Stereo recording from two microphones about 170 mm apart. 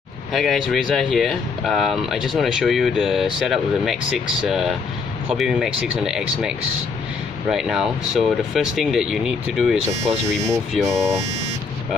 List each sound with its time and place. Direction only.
0.3 s speech: centre (ahead or behind)
7.5 s speech: 5° right (ahead or behind)
10.5 s speech: 20° right (ahead or behind)